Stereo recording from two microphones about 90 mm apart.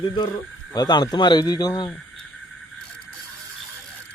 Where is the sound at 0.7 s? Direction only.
50° left (ahead or behind).